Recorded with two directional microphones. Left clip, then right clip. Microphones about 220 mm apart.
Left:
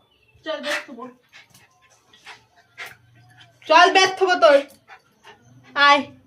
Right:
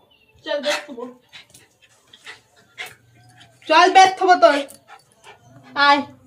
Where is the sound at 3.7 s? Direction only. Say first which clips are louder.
Right 2 dB; 45° left (ahead or behind).